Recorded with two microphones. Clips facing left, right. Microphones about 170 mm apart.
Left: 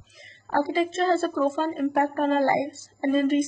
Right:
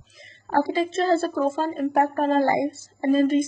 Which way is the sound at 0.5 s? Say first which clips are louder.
Right 2 dB; 35° right (ahead or behind).